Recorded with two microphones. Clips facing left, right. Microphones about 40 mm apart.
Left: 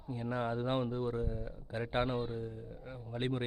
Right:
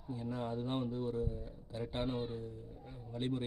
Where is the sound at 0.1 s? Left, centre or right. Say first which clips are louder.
Left 4 dB; left.